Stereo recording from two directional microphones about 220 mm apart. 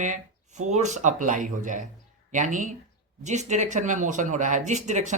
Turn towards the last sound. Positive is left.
turn(degrees=-35)  # may be behind; listen again after turning